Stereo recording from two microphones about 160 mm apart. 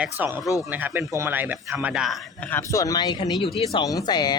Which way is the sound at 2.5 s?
20° left (ahead or behind).